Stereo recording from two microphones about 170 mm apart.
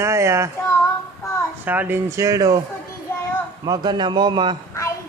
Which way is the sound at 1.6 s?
10° right (ahead or behind).